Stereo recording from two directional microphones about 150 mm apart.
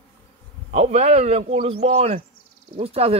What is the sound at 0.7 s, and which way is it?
A man's voice, 45° right (ahead or behind).